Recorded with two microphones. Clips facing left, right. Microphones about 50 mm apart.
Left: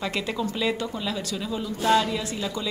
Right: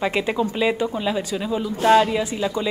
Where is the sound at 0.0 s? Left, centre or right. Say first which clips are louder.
Right 6 dB; right.